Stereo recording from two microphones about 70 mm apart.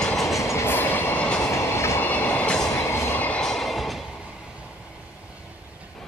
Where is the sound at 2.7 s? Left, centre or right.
Left.